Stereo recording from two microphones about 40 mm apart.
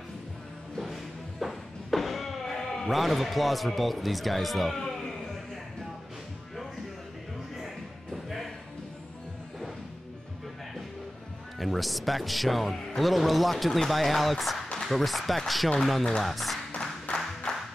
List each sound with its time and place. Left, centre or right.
0.7 s music: centre
8.1 s music: centre
11.6 s speech: centre
17.1 s a sound: centre